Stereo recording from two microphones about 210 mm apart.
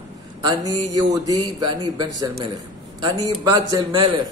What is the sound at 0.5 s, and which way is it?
Speech, 15° right (ahead or behind).